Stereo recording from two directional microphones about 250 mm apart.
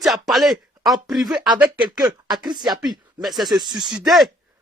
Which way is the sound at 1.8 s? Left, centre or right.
Centre.